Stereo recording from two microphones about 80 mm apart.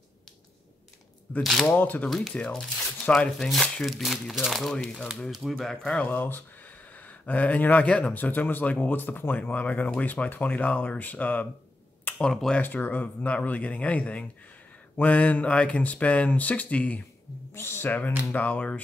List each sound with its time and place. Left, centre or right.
1.4 s speech: centre
1.7 s speech: left
2.0 s speech: centre
3.8 s speech: centre
5.9 s speech: left
12.2 s speech: centre
12.6 s speech: left
17.6 s speech: left